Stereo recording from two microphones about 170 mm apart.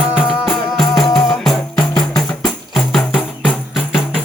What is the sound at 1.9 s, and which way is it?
Music, 25° left (ahead or behind).